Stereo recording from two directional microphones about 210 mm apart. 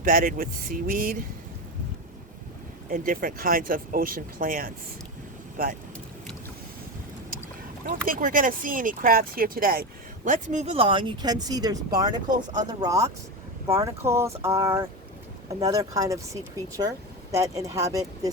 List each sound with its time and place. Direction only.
0.0 s speech: 40° right (ahead or behind)
2.9 s speech: 40° right (ahead or behind)
7.9 s speech: 40° right (ahead or behind); by 18.3 s 15° right (ahead or behind)